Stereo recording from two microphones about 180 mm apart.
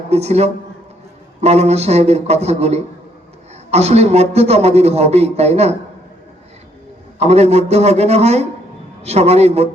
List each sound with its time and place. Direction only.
0.1 s a man's voice: 35° right (ahead or behind)
7.2 s a man's voice: 35° right (ahead or behind)